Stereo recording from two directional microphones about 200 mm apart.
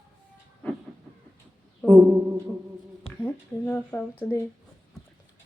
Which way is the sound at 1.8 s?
5° left (ahead or behind).